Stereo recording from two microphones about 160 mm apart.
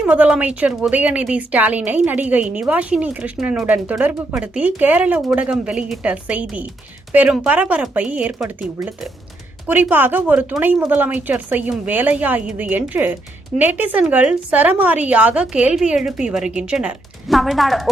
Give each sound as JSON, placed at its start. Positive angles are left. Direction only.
{"t": 0.0, "sound": "speech", "side_deg": -10}